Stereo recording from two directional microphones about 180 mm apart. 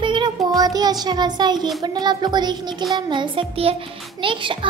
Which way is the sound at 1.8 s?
25° right (ahead or behind).